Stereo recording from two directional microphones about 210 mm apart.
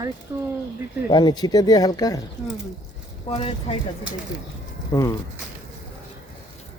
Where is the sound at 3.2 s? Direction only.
25° left (ahead or behind).